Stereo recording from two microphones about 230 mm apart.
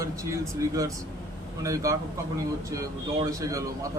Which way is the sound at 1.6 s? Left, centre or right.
Centre.